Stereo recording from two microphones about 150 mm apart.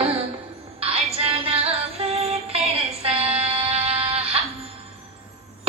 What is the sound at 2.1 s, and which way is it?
Music, 40° right (ahead or behind).